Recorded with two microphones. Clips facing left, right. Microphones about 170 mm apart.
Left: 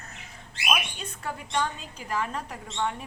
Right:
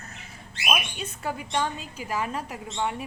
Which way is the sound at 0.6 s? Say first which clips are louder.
Right 1 dB; 10° right (ahead or behind).